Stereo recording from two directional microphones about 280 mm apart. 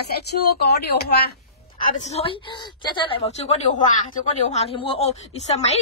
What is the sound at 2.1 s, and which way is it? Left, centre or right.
A woman's voice, centre.